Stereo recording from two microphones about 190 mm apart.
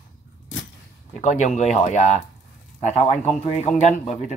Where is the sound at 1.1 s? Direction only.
40° left (ahead or behind).